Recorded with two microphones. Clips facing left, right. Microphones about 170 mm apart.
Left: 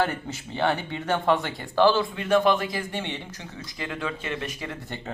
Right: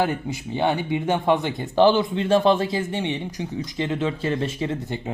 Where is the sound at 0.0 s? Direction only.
15° right (ahead or behind).